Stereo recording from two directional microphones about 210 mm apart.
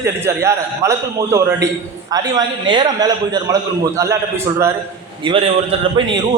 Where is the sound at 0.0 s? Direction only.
15° right (ahead or behind).